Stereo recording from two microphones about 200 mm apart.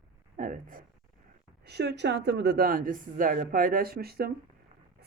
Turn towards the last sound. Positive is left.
turn(degrees=-50)  # may be behind; listen again after turning